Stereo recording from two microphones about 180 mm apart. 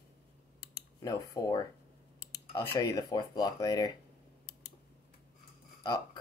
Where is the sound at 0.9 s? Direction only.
20° left (ahead or behind).